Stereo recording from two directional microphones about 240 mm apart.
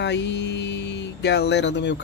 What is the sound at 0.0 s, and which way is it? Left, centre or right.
A man's voice, left.